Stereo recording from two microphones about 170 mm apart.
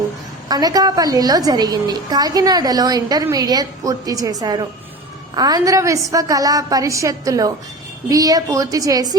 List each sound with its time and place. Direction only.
0.4 s a woman's voice: 25° right (ahead or behind)